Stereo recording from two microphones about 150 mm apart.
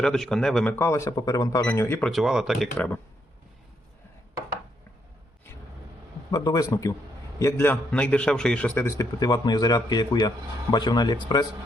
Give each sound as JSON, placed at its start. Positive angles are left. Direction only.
{"t": 0.0, "sound": "speech", "side_deg": 5}
{"t": 2.0, "sound": "speech", "side_deg": 0}
{"t": 6.3, "sound": "a man's voice", "side_deg": 30}